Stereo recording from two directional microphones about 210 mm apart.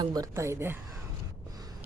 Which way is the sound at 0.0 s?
15° right (ahead or behind).